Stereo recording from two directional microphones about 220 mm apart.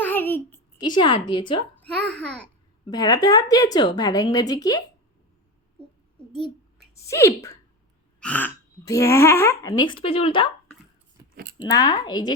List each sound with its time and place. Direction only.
0.0 s a sound: 10° left (ahead or behind)
1.3 s speech: 20° left (ahead or behind)
1.8 s a child's voice: 5° left (ahead or behind)
2.8 s speech: 20° left (ahead or behind)
6.9 s speech: 15° left (ahead or behind)
11.2 s scissors: 15° right (ahead or behind)
11.5 s speech: 20° left (ahead or behind)